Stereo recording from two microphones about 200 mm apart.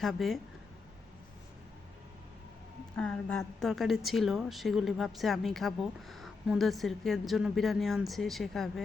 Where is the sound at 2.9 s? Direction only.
5° left (ahead or behind).